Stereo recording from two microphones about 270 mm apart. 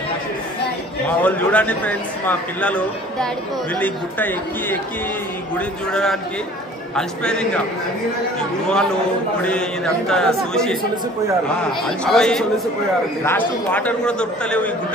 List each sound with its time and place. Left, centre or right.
1.2 s a man's voice: centre
7.0 s a man's voice: centre
8.6 s a man's voice: centre
12.0 s a man's voice: centre